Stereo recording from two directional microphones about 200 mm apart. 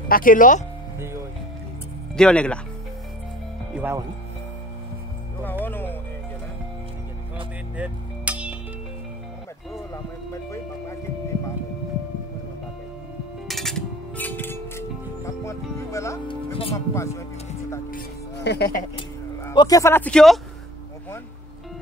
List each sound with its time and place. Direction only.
0.1 s speech: 45° left (ahead or behind)
2.1 s speech: 5° left (ahead or behind)
3.7 s speech: 10° right (ahead or behind)
5.4 s music: 10° left (ahead or behind)
7.7 s music: 5° right (ahead or behind)
10.3 s music: 15° left (ahead or behind)
13.5 s music: centre (ahead or behind)
16.7 s speech: 15° left (ahead or behind)
17.9 s music: 55° left (ahead or behind)
18.8 s speech: 20° left (ahead or behind); by 20.3 s 5° left (ahead or behind)